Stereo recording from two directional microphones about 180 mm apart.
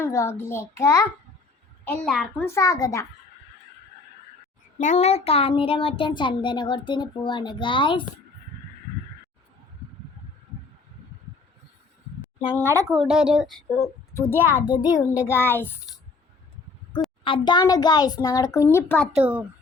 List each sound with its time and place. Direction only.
0.0 s a child's voice: 15° left (ahead or behind)
2.4 s a child's voice: 15° left (ahead or behind)
4.8 s speech: 40° left (ahead or behind)
12.8 s a woman's voice: centre (ahead or behind)
13.7 s speech: 15° left (ahead or behind)
15.1 s a woman's voice: 10° right (ahead or behind)
15.4 s a child's voice: 10° left (ahead or behind)
17.2 s speech: 25° left (ahead or behind)
19.1 s a woman's voice: 10° right (ahead or behind)